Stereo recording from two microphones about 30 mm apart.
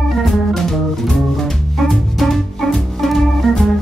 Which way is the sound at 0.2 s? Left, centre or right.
Centre.